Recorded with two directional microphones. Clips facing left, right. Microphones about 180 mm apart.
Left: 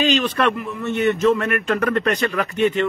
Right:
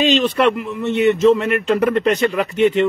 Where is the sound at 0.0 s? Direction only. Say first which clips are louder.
Right 4 dB; 25° right (ahead or behind).